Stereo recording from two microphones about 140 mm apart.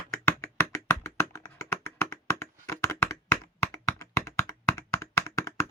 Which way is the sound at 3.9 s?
20° left (ahead or behind).